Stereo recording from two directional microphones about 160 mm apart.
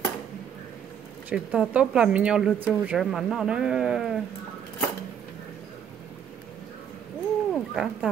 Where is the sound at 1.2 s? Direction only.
5° right (ahead or behind).